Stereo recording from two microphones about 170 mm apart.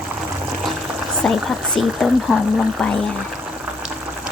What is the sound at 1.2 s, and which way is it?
Speech, 5° left (ahead or behind).